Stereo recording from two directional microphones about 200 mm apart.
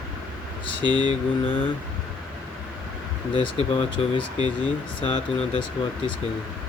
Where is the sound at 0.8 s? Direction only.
20° right (ahead or behind).